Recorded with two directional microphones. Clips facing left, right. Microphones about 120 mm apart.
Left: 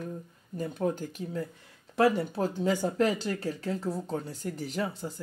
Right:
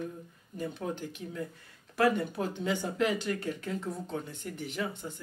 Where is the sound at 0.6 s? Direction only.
40° left (ahead or behind).